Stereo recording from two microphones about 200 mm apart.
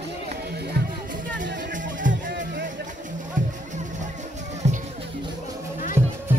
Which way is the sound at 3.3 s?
40° right (ahead or behind).